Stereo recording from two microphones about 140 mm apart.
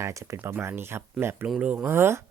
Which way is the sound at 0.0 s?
20° right (ahead or behind).